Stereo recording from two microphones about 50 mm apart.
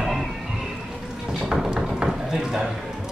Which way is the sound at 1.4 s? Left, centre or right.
Centre.